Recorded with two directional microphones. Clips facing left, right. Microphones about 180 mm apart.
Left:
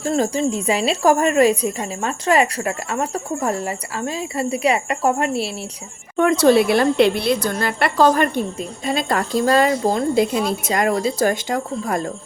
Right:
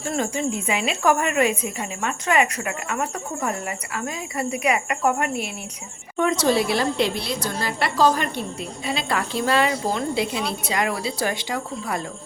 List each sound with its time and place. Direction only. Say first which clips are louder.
0.0 s speech: left 5 dB; 35° left (ahead or behind)
6.1 s a woman's voice: left 6 dB; 55° left (ahead or behind)